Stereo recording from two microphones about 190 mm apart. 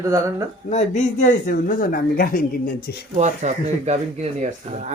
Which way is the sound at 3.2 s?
35° right (ahead or behind).